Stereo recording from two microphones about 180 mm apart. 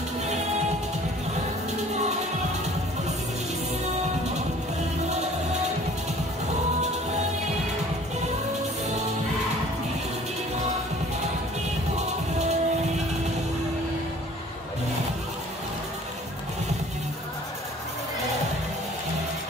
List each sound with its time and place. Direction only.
1.7 s music: 40° right (ahead or behind)
12.4 s music: 40° right (ahead or behind)